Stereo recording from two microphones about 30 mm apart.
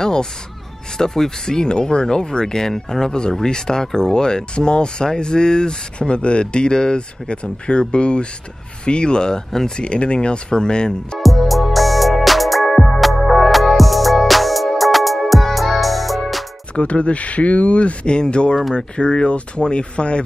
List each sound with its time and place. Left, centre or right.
0.0 s a sound: left
0.9 s speech: centre
5.9 s speech: left
11.1 s music: centre
16.7 s speech: left